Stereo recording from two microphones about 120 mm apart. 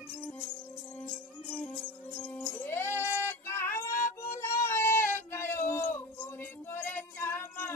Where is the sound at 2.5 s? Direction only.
20° left (ahead or behind).